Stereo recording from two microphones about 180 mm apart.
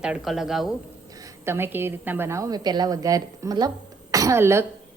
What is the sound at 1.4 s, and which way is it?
A woman's voice, 10° right (ahead or behind).